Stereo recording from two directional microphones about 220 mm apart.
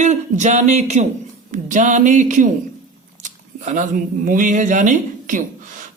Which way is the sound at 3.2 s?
35° right (ahead or behind).